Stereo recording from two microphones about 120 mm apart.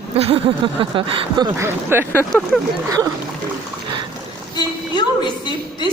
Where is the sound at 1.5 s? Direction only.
20° right (ahead or behind).